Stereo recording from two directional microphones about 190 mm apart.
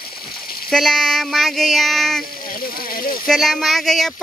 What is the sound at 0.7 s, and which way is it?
Speech, centre (ahead or behind).